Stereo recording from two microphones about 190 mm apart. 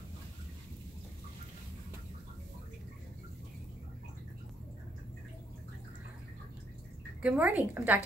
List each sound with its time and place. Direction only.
7.2 s a woman's voice: 5° right (ahead or behind)